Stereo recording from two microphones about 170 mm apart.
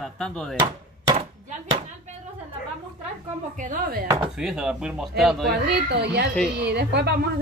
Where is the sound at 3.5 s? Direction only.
55° right (ahead or behind).